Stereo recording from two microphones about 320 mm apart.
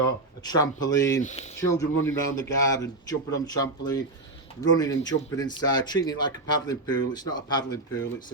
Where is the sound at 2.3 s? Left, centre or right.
Centre.